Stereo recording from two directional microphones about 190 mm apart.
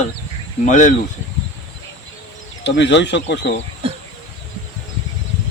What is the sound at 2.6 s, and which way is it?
Speech, 65° left (ahead or behind).